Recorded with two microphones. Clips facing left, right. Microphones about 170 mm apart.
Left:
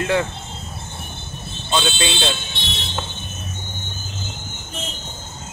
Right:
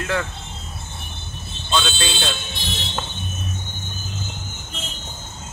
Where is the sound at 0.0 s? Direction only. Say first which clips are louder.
Left 4 dB; 20° left (ahead or behind).